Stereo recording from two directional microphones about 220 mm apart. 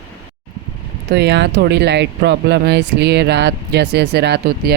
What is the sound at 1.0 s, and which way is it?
Speech, 50° right (ahead or behind).